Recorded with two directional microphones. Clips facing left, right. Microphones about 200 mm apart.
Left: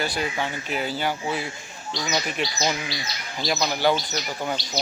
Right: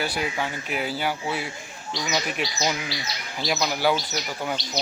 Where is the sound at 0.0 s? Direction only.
10° right (ahead or behind).